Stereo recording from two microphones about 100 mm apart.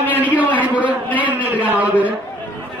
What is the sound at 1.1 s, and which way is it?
Speech, 15° right (ahead or behind).